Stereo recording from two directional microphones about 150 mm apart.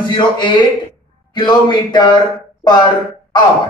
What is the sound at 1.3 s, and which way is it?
Speech, 30° left (ahead or behind).